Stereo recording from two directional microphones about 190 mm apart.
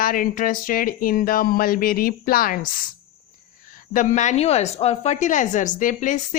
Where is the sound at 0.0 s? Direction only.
50° left (ahead or behind).